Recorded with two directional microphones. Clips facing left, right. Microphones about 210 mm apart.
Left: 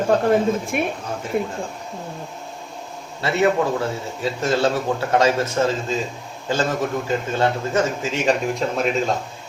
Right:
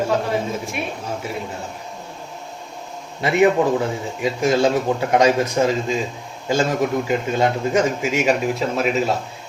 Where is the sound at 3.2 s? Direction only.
15° right (ahead or behind).